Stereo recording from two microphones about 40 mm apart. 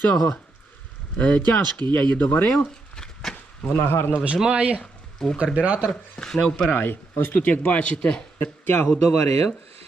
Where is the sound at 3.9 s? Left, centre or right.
Left.